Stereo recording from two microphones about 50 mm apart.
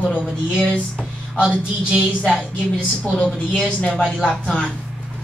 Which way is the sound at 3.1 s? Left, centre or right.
Centre.